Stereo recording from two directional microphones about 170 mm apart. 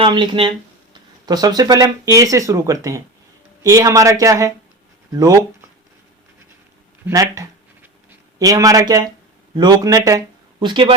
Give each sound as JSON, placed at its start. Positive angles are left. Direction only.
{"t": 0.0, "sound": "speech", "side_deg": -30}
{"t": 7.1, "sound": "a sound", "side_deg": -20}
{"t": 8.4, "sound": "speech", "side_deg": -20}